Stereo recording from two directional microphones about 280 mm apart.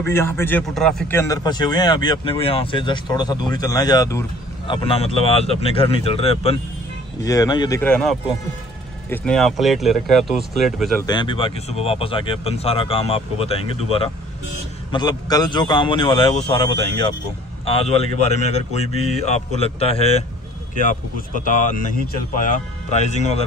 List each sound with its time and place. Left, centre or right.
0.0 s a man's voice: centre
11.1 s a man's voice: centre